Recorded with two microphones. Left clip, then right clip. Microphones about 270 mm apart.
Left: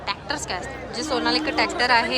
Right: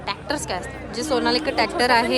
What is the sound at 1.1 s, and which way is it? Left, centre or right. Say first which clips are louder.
A woman's voice: right 2 dB; centre.